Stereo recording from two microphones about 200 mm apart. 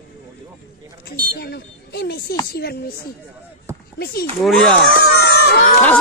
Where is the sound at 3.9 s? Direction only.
55° left (ahead or behind).